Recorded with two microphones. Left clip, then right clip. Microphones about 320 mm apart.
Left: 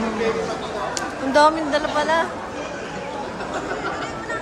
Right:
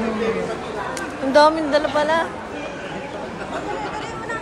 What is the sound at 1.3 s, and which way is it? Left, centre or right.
Speech, centre.